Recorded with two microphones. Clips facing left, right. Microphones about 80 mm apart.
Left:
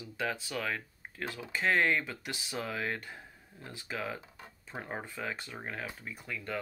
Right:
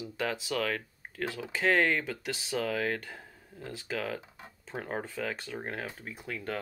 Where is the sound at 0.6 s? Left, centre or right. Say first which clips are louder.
Right 4 dB; right.